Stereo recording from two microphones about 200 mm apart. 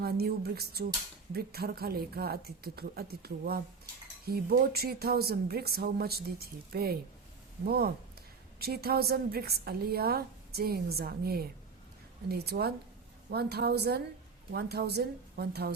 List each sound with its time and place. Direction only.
0.0 s a woman's voice: 50° right (ahead or behind)